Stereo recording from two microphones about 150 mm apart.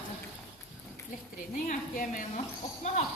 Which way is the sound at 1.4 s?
65° left (ahead or behind).